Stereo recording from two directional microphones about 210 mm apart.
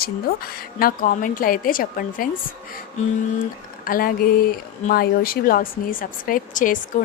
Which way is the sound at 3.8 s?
45° left (ahead or behind).